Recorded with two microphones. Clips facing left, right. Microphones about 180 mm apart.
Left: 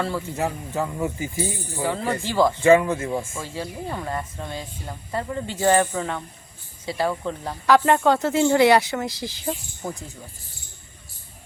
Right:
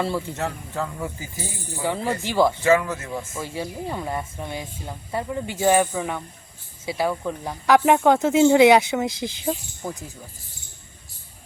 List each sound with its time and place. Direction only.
0.0 s speech: 15° right (ahead or behind)
0.3 s speech: 15° left (ahead or behind)
1.8 s speech: 20° right (ahead or behind)
2.6 s speech: 25° left (ahead or behind)
3.3 s speech: 15° right (ahead or behind)
9.5 s speech: centre (ahead or behind)